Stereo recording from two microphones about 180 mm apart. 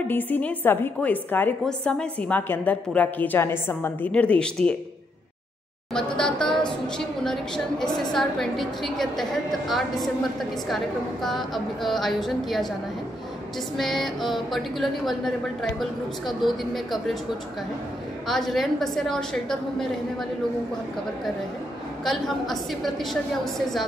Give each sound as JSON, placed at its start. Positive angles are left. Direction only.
{"t": 0.1, "sound": "a woman's voice", "side_deg": 10}
{"t": 5.9, "sound": "a woman's voice", "side_deg": 5}
{"t": 11.2, "sound": "a woman's voice", "side_deg": 0}
{"t": 13.7, "sound": "a woman's voice", "side_deg": 0}
{"t": 18.2, "sound": "a woman's voice", "side_deg": 0}
{"t": 22.0, "sound": "a woman's voice", "side_deg": 0}